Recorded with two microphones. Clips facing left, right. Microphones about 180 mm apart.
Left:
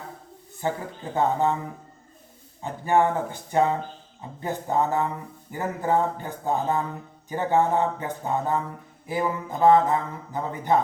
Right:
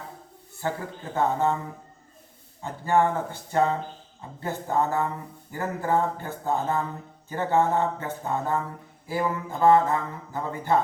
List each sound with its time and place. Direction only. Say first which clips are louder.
0.6 s speech: left 2 dB; 15° left (ahead or behind)
2.6 s speech: left 1 dB; 15° left (ahead or behind)